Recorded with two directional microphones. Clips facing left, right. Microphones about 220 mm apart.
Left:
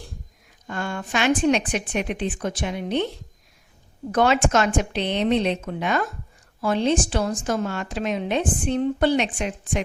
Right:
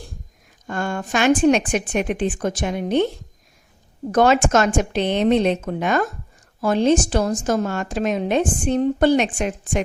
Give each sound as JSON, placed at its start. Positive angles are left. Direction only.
{"t": 0.7, "sound": "a woman's voice", "side_deg": -45}
{"t": 4.1, "sound": "a woman's voice", "side_deg": -45}